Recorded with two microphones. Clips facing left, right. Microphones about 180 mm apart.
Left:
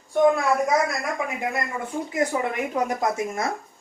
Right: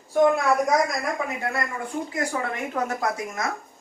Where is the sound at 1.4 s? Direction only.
15° left (ahead or behind).